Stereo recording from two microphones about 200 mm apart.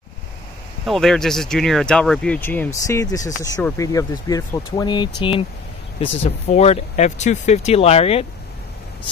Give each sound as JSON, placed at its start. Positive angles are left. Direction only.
{"t": 0.8, "sound": "speech", "side_deg": 0}